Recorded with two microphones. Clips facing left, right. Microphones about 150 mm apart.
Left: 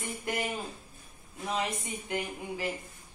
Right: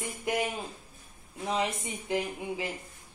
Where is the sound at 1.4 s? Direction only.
25° right (ahead or behind).